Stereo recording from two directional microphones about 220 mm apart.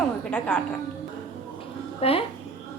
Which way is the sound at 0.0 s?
5° left (ahead or behind).